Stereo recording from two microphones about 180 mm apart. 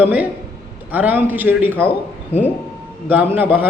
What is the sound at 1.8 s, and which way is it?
Speech, 10° left (ahead or behind).